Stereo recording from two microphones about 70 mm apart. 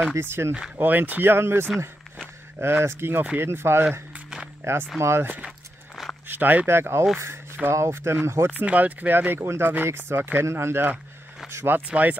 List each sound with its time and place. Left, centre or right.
0.1 s speech: right
8.5 s speech: right